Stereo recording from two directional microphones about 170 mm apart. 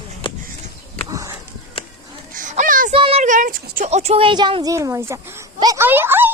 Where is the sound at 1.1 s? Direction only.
20° right (ahead or behind).